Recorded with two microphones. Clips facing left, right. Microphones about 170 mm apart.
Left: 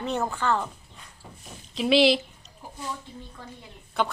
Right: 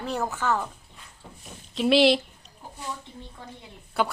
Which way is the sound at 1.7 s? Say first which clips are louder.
Right 1 dB; centre (ahead or behind).